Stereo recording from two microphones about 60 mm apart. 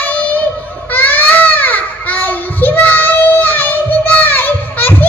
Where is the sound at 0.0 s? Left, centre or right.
Left.